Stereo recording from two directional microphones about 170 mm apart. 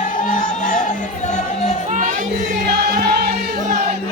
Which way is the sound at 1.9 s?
45° right (ahead or behind).